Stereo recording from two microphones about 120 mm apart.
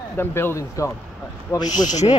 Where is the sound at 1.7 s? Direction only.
80° left.